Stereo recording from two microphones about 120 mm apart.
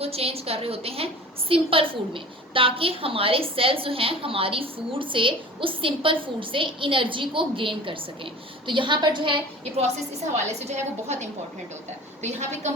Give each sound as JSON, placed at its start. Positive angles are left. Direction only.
{"t": 0.0, "sound": "a woman's voice", "side_deg": -55}
{"t": 10.6, "sound": "a woman's voice", "side_deg": -70}